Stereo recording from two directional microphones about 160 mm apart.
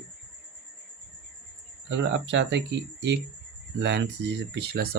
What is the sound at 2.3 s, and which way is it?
Speech, 90° right.